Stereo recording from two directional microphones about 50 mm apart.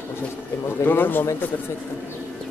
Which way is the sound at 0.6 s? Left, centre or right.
Left.